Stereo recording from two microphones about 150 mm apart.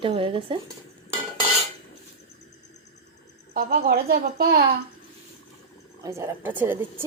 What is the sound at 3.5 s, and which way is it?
Speech, 90° right.